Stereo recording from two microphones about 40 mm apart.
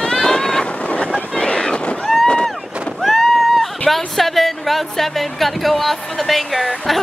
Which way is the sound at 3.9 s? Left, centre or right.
Centre.